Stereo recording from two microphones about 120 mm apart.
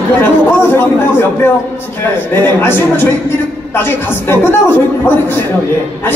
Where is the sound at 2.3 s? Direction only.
15° left (ahead or behind).